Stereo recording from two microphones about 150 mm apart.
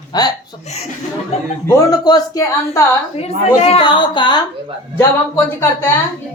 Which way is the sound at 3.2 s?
45° left (ahead or behind).